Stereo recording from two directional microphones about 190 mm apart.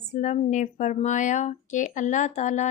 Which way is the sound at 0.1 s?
40° left (ahead or behind).